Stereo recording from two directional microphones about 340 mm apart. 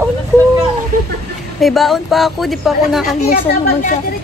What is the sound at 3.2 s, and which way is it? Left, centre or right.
Speech, left.